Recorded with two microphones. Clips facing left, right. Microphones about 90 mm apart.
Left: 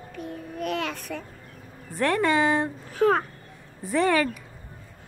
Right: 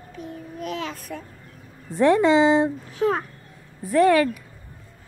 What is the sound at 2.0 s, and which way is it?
Speech, 15° right (ahead or behind).